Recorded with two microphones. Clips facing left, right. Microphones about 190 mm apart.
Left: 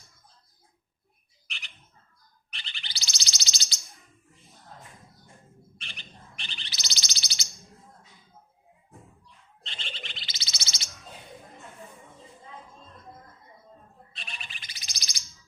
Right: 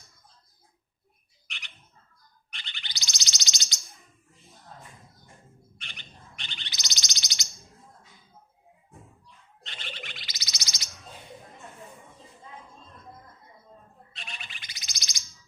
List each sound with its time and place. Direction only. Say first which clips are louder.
1.5 s bird: left 1 dB; 35° left (ahead or behind)
5.7 s bird: left 1 dB; 30° left (ahead or behind)
9.6 s chirp: right 1 dB; 30° left (ahead or behind)
14.3 s bird: right 1 dB; 35° left (ahead or behind)